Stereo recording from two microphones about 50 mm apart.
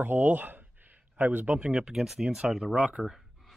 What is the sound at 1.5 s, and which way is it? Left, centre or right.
Speech, centre.